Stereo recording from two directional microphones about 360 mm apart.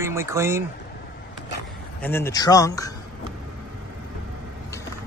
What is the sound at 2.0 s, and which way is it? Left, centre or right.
Speech, centre.